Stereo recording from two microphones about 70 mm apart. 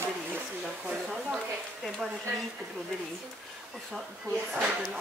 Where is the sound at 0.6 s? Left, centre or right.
Centre.